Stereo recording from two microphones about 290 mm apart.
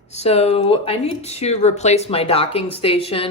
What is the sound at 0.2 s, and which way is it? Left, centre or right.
Speech, left.